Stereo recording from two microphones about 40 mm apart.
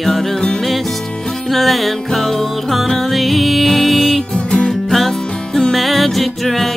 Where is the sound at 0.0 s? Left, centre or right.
Centre.